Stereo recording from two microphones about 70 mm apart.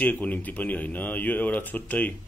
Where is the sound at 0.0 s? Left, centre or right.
Left.